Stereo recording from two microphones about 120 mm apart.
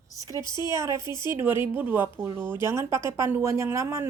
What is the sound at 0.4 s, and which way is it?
Speech, 35° left (ahead or behind).